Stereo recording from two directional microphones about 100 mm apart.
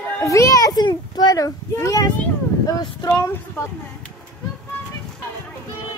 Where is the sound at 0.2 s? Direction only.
30° left (ahead or behind).